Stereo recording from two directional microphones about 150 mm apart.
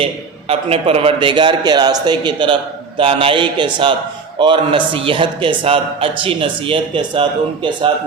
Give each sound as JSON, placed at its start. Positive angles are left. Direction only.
{"t": 0.0, "sound": "a man's voice", "side_deg": -40}